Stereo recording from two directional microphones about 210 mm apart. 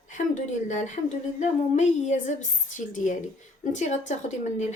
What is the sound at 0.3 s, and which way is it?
Speech, 35° left (ahead or behind).